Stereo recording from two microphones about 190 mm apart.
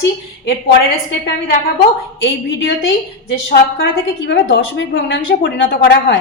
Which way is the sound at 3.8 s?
70° left (ahead or behind).